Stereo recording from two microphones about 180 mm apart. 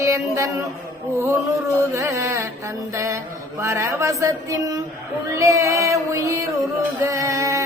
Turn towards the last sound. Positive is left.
turn(degrees=-15)  # may be behind; listen again after turning